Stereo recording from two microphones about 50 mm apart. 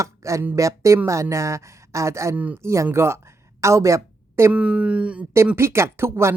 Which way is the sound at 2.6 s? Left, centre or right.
Right.